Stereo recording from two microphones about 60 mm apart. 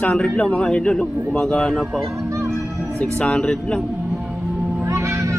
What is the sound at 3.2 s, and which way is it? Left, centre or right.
Speech, centre.